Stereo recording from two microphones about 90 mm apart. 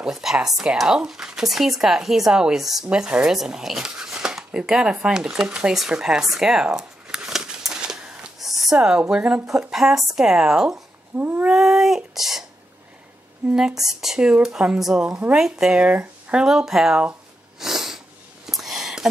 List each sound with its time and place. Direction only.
0.0 s speech: 5° right (ahead or behind)
11.1 s cat: 20° right (ahead or behind)
11.5 s a sound: 5° right (ahead or behind)
13.5 s speech: 10° right (ahead or behind)
17.6 s sniff: 5° right (ahead or behind)
18.5 s a sound: 5° right (ahead or behind)